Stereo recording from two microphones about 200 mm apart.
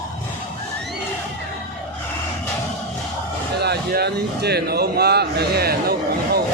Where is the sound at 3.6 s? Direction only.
55° right (ahead or behind).